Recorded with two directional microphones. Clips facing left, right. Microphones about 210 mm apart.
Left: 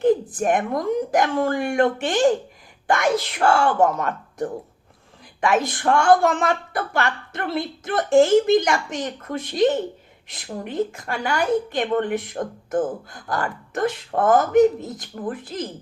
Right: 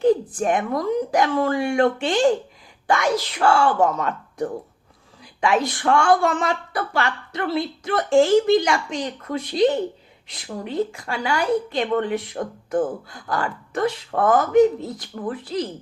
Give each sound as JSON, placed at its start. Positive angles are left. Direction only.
{"t": 0.3, "sound": "speech", "side_deg": 50}
{"t": 5.6, "sound": "speech", "side_deg": 45}
{"t": 14.8, "sound": "speech", "side_deg": 20}
{"t": 15.3, "sound": "speech", "side_deg": 50}